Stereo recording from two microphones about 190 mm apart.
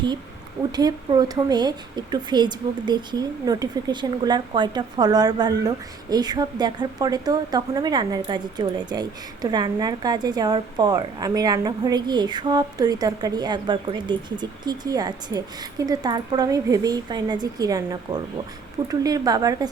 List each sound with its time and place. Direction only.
0.7 s a woman's voice: 20° right (ahead or behind)